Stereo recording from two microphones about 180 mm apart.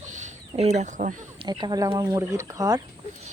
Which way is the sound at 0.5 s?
35° right (ahead or behind).